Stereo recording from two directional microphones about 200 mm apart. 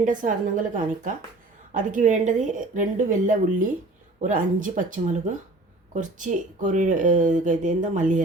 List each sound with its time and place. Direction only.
0.0 s speech: 40° right (ahead or behind)